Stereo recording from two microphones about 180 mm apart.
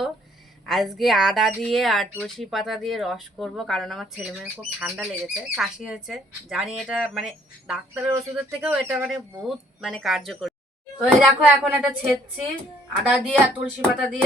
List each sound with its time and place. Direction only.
0.6 s speech: centre (ahead or behind)
13.1 s speech: 5° right (ahead or behind)